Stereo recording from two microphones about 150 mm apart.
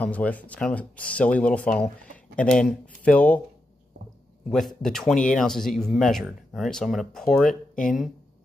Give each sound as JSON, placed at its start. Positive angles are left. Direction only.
{"t": 0.0, "sound": "speech", "side_deg": 10}
{"t": 4.5, "sound": "speech", "side_deg": 0}